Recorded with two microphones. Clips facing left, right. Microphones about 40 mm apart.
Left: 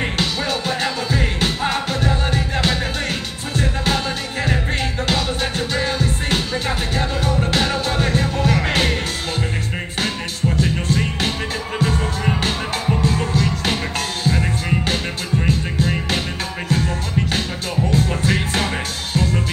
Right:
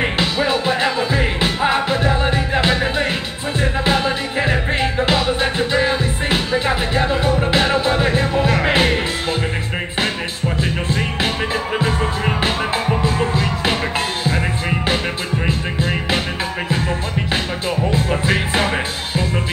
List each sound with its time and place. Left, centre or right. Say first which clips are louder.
0.0 s music: right 4 dB; right
10.6 s music: even; right